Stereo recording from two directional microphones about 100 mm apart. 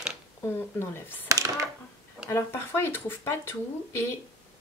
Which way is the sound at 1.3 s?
30° right (ahead or behind).